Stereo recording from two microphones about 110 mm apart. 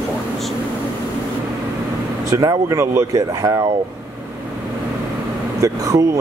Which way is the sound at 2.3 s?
35° right (ahead or behind).